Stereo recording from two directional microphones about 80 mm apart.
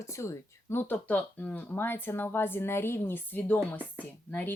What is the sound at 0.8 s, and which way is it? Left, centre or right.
Speech, left.